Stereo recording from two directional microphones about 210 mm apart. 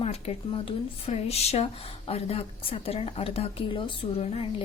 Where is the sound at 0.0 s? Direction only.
30° left (ahead or behind).